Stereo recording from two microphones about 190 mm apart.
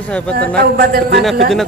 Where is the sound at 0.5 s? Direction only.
55° right (ahead or behind).